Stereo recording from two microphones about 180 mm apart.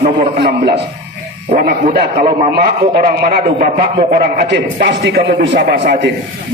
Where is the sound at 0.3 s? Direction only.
65° right (ahead or behind).